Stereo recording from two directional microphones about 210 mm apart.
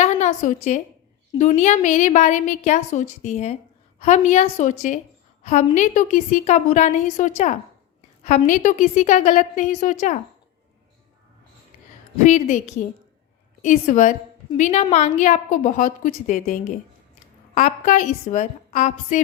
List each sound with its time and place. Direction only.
0.0 s a sound: 35° left (ahead or behind)
1.4 s a woman's voice: 35° left (ahead or behind)
12.2 s a woman's voice: 35° left (ahead or behind)
13.6 s a woman's voice: 35° left (ahead or behind)